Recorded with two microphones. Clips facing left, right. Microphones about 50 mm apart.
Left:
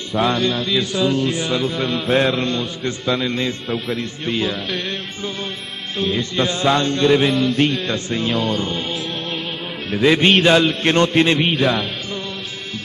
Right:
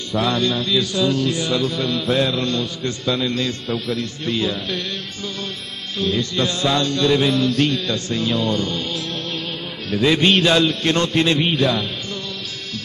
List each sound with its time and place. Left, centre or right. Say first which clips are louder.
0.3 s music: left 1 dB; centre
0.7 s mantra: even; left
3.1 s music: left 1 dB; centre
3.3 s mantra: left 1 dB; left
5.9 s mantra: left 1 dB; left
8.3 s music: even; centre
8.5 s music: left 1 dB; left
9.8 s mantra: left 2 dB; left